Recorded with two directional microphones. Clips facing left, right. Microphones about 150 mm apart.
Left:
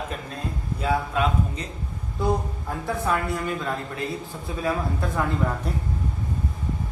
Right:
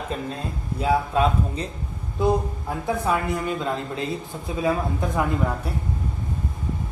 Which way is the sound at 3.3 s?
20° right (ahead or behind).